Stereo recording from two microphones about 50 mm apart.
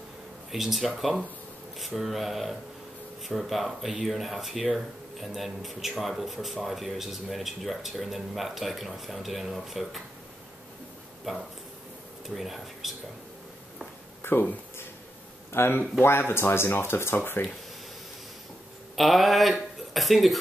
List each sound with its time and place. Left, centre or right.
0.5 s speech: centre
11.3 s speech: centre
14.2 s a sound: left
15.5 s speech: left
18.9 s speech: centre